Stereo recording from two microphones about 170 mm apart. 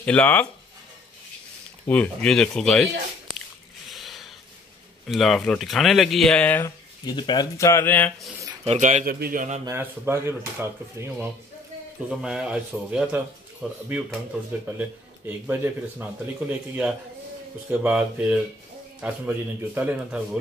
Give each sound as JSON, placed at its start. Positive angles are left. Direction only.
{"t": 0.0, "sound": "speech", "side_deg": 5}
{"t": 1.9, "sound": "speech", "side_deg": 5}
{"t": 3.9, "sound": "a sound", "side_deg": 0}
{"t": 5.0, "sound": "speech", "side_deg": 0}
{"t": 7.1, "sound": "speech", "side_deg": 25}
{"t": 8.6, "sound": "a man's voice", "side_deg": -45}
{"t": 9.7, "sound": "speech", "side_deg": -15}